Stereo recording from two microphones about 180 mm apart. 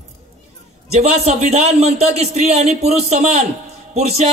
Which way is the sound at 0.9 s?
40° right (ahead or behind).